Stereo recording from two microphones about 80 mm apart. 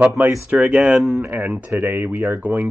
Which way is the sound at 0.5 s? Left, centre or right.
Centre.